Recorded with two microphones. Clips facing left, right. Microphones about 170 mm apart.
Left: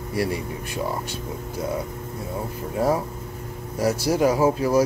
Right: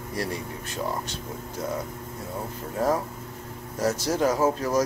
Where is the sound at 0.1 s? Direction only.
10° left (ahead or behind).